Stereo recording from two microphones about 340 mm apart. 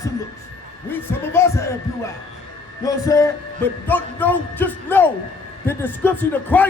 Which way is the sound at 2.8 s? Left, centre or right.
Centre.